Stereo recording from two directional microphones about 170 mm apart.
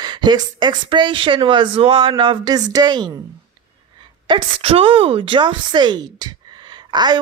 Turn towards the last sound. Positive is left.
turn(degrees=-25)  # may be behind; listen again after turning